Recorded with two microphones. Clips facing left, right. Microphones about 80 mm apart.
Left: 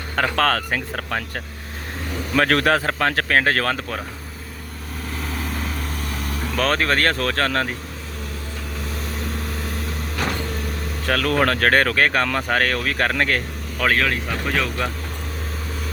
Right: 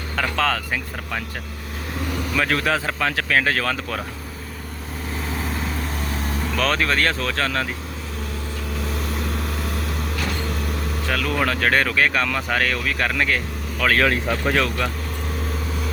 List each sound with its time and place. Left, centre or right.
0.2 s speech: left
2.3 s speech: left
6.0 s vehicle: right
6.6 s speech: left
11.0 s speech: left
14.0 s speech: right